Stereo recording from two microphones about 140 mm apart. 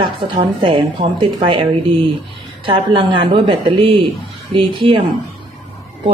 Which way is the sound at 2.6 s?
40° right (ahead or behind).